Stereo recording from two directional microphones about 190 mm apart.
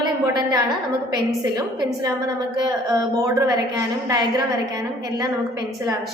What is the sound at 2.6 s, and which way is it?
A woman's voice, 20° right (ahead or behind).